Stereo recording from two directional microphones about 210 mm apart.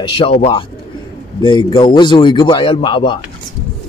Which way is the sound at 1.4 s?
20° left (ahead or behind).